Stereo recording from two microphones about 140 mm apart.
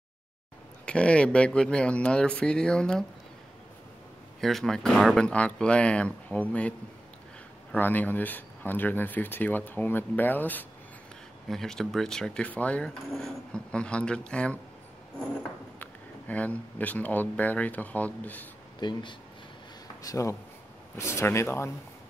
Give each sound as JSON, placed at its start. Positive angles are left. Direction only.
{"t": 0.8, "sound": "speech", "side_deg": 10}
{"t": 4.4, "sound": "speech", "side_deg": 0}
{"t": 7.7, "sound": "speech", "side_deg": 10}
{"t": 15.8, "sound": "speech", "side_deg": 10}
{"t": 18.8, "sound": "speech", "side_deg": 30}